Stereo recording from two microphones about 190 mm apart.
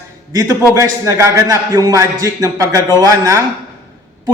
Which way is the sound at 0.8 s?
15° right (ahead or behind).